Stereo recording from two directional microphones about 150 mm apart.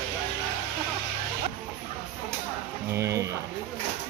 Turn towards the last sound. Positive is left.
turn(degrees=-20)  # may be behind; listen again after turning